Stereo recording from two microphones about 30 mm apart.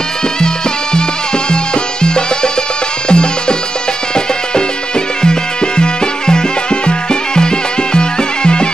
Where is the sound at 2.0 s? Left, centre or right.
Left.